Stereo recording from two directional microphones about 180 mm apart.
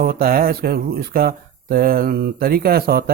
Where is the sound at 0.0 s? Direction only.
55° right (ahead or behind).